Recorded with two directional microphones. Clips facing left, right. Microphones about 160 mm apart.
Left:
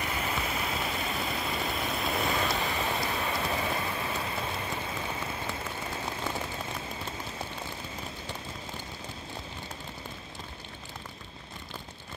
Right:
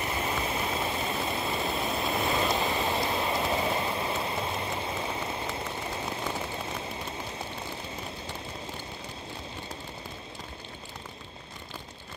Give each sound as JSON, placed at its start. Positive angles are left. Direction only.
{"t": 0.0, "sound": "vehicle", "side_deg": -30}